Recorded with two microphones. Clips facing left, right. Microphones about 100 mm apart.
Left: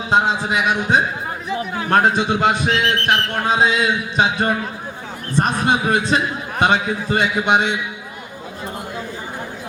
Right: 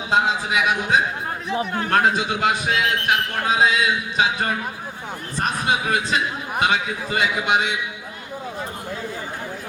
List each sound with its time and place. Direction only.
0.1 s a man's voice: 30° left (ahead or behind)